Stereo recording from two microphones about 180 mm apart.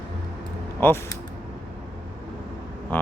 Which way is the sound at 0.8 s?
10° left (ahead or behind).